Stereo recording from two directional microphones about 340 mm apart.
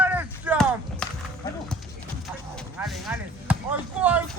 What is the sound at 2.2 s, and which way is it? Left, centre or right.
Basketball bounce, centre.